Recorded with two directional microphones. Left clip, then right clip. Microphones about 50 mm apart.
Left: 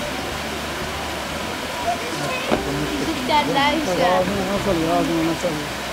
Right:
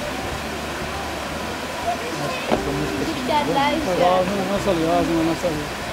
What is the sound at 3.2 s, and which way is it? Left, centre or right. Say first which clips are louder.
Speech: left 2 dB; left.